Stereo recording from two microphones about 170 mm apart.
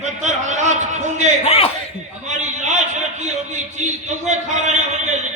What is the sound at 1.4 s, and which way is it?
Speech, 35° left (ahead or behind).